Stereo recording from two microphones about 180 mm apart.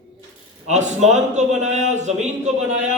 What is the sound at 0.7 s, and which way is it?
A man's voice, 40° right (ahead or behind).